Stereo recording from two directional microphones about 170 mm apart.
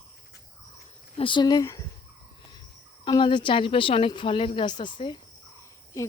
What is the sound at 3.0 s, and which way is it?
Speech, 30° left (ahead or behind).